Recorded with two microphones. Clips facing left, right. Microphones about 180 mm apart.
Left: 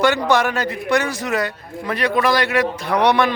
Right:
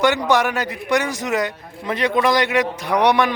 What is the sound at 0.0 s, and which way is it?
A man's voice, 15° right (ahead or behind).